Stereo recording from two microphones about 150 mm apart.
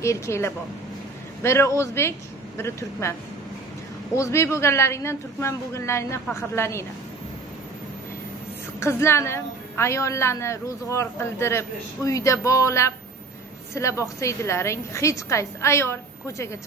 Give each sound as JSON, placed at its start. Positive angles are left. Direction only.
{"t": 0.0, "sound": "a woman's voice", "side_deg": 20}
{"t": 8.7, "sound": "a woman's voice", "side_deg": 15}